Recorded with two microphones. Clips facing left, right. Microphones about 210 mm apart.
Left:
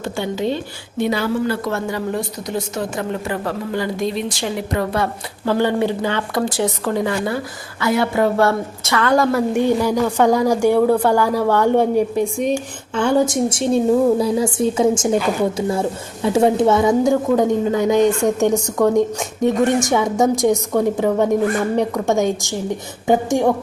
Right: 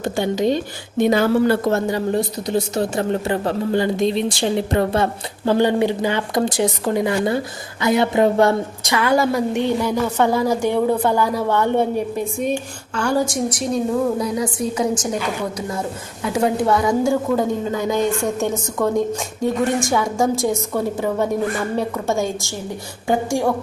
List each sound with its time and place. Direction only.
0.0 s speech: 15° right (ahead or behind)
1.0 s a woman's voice: 50° right (ahead or behind)
1.9 s a woman's voice: 30° right (ahead or behind); by 9.3 s 5° right (ahead or behind)
9.3 s a woman's voice: 10° left (ahead or behind)
13.0 s a woman's voice: 20° left (ahead or behind)